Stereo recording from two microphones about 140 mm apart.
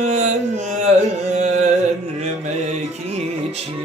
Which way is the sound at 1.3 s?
55° right (ahead or behind).